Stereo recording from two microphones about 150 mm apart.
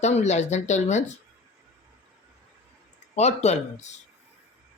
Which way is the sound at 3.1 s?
45° left (ahead or behind).